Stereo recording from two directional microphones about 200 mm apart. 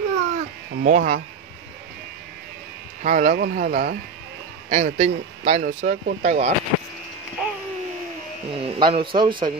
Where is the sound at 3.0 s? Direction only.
40° right (ahead or behind).